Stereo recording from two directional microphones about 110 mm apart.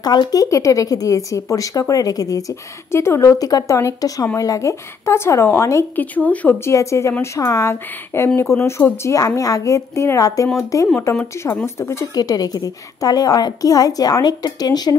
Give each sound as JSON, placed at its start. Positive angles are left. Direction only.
{"t": 0.0, "sound": "a woman's voice", "side_deg": 40}
{"t": 6.1, "sound": "speech", "side_deg": 15}
{"t": 6.7, "sound": "speech", "side_deg": 25}
{"t": 12.2, "sound": "a woman's voice", "side_deg": 35}